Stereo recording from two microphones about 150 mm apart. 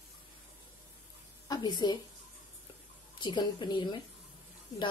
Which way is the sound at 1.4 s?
30° left (ahead or behind).